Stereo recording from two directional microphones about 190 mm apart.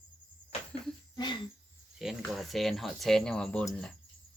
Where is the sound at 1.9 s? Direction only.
Centre (ahead or behind).